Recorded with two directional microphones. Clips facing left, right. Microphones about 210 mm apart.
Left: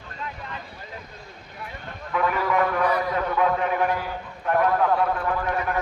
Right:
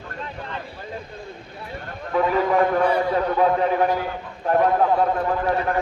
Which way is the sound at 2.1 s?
30° right (ahead or behind).